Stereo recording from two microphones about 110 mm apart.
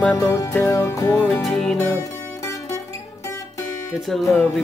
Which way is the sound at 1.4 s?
5° left (ahead or behind).